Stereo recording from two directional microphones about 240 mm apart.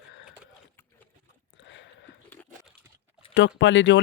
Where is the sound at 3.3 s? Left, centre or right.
Left.